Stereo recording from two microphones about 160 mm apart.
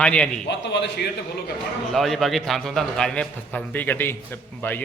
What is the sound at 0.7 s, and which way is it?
Speech, 90° left.